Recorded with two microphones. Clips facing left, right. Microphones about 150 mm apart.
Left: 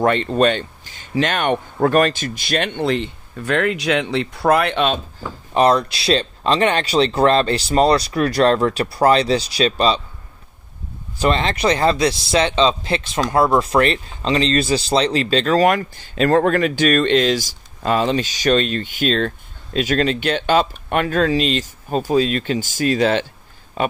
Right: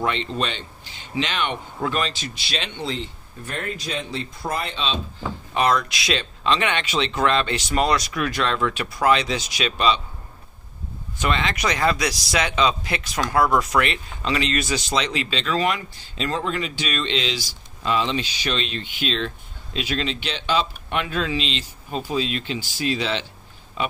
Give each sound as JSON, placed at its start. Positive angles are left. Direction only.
{"t": 0.0, "sound": "speech", "side_deg": 50}
{"t": 5.5, "sound": "speech", "side_deg": 35}
{"t": 11.1, "sound": "speech", "side_deg": 35}